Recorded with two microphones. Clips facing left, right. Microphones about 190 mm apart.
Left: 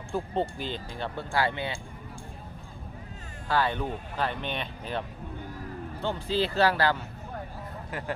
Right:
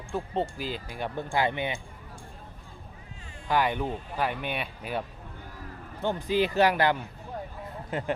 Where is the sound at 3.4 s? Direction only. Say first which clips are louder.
Right 1 dB; 15° right (ahead or behind).